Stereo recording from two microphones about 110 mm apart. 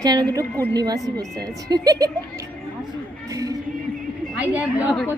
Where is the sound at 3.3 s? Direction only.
30° right (ahead or behind).